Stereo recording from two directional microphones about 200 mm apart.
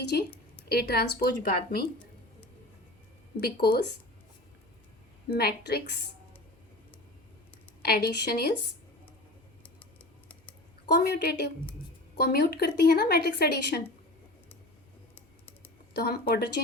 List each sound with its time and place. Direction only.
0.0 s a woman's voice: 55° left (ahead or behind)
5.3 s speech: 50° left (ahead or behind)
7.8 s speech: 50° left (ahead or behind)
10.8 s speech: 55° left (ahead or behind)
15.1 s typing: 10° left (ahead or behind)
15.9 s speech: 55° left (ahead or behind)